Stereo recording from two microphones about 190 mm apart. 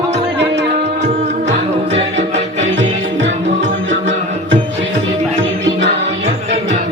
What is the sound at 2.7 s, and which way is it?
Music, 70° right (ahead or behind).